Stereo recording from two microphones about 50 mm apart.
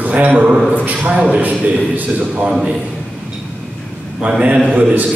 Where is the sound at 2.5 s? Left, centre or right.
Centre.